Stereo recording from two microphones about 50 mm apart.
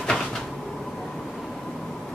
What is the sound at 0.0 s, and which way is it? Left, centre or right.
Cupboard open or close, centre.